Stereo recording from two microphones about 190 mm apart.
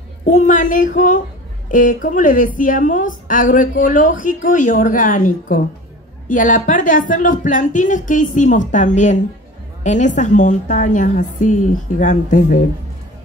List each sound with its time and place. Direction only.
0.2 s a woman's voice: 40° left (ahead or behind)